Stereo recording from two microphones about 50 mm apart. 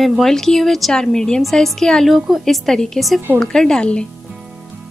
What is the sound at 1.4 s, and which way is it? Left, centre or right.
Speech, centre.